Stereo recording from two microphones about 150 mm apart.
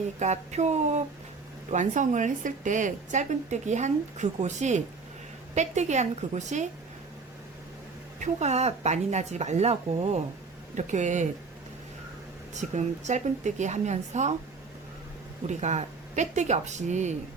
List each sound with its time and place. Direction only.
0.2 s a woman's voice: 50° right (ahead or behind)
8.2 s a woman's voice: 50° right (ahead or behind)
12.5 s speech: 50° right (ahead or behind)
15.4 s speech: 50° right (ahead or behind)